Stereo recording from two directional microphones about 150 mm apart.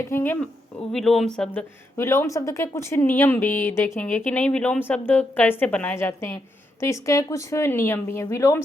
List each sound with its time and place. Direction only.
0.1 s speech: 15° left (ahead or behind)
2.0 s a woman's voice: 20° left (ahead or behind)